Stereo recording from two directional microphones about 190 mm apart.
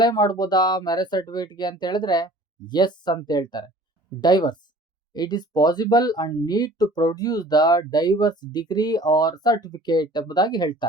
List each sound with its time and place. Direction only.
0.0 s speech: 20° left (ahead or behind)